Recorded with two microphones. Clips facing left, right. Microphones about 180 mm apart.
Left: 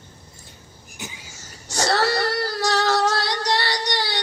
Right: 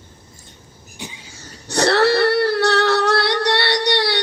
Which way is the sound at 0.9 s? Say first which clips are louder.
Right 2 dB; 30° right (ahead or behind).